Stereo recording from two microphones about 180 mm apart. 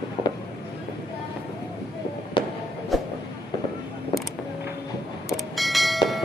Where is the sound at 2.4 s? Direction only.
25° left (ahead or behind).